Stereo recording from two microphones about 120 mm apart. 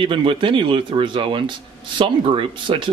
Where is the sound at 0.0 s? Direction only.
45° right (ahead or behind).